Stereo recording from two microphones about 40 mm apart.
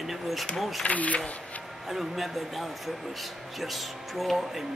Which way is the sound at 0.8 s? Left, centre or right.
Left.